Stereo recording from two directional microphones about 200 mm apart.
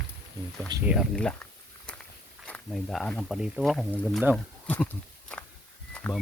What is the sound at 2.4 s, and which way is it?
Speech, 5° left (ahead or behind).